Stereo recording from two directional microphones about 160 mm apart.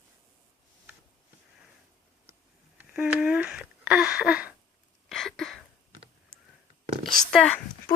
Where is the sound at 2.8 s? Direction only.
5° right (ahead or behind).